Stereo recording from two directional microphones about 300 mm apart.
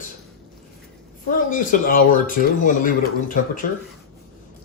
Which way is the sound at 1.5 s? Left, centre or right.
Left.